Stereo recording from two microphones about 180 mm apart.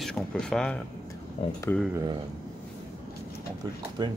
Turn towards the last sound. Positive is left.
turn(degrees=-25)  # may be behind; listen again after turning